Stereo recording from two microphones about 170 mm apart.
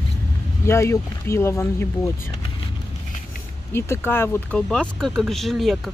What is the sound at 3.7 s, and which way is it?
Speech, 15° left (ahead or behind).